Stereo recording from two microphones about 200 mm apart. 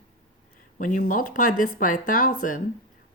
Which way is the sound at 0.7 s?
40° left (ahead or behind).